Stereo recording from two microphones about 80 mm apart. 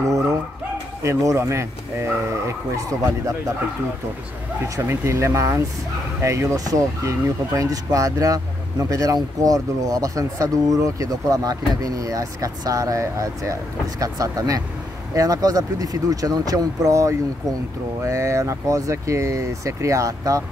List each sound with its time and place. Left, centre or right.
1.0 s speech: right
4.7 s speech: right